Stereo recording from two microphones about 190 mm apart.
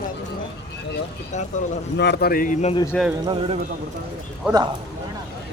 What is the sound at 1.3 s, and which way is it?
Speech, 40° left (ahead or behind).